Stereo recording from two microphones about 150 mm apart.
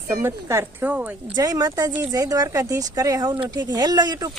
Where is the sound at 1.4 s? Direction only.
25° right (ahead or behind).